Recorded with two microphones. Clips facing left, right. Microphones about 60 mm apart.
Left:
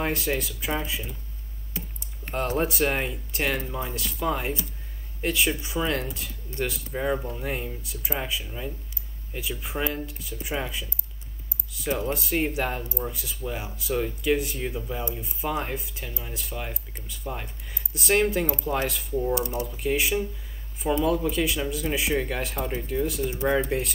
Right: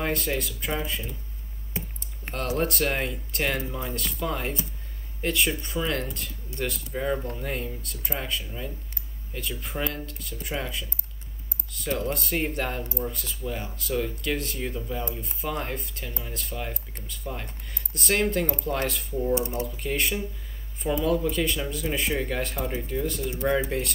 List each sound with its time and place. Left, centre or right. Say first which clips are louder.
0.0 s speech: left 1 dB; centre
2.6 s speech: right 1 dB; centre
19.3 s speech: right 1 dB; right
19.6 s speech: left 2 dB; centre